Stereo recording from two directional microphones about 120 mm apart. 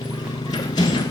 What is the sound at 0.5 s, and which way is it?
Clip-clop, 35° left (ahead or behind).